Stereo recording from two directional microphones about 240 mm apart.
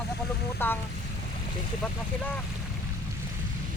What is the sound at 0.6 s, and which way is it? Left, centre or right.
Speech, centre.